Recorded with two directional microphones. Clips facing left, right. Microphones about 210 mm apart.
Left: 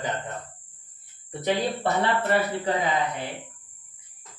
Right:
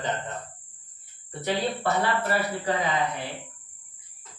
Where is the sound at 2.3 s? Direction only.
20° left (ahead or behind).